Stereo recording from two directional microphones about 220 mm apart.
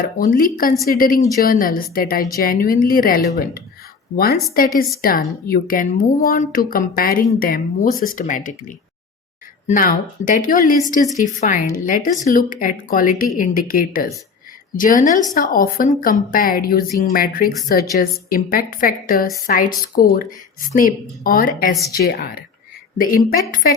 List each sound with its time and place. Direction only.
0.0 s a woman's voice: 40° left (ahead or behind)